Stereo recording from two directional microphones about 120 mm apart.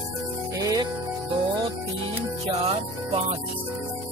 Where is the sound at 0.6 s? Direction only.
30° right (ahead or behind).